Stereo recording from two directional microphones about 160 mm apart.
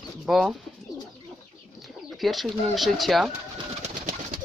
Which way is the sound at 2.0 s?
Centre (ahead or behind).